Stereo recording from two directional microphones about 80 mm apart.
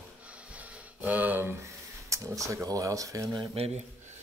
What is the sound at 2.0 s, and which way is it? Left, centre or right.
Speech, right.